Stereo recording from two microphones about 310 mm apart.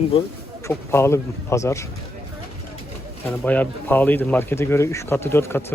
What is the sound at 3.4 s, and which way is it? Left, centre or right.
Speech, centre.